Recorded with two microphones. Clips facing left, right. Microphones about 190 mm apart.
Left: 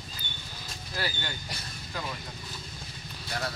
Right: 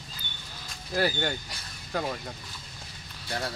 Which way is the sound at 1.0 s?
50° right (ahead or behind).